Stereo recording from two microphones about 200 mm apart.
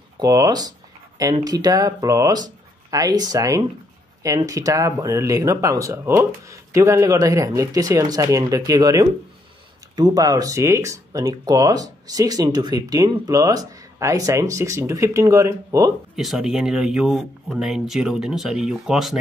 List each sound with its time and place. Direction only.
0.2 s speech: 20° right (ahead or behind)
16.2 s speech: centre (ahead or behind)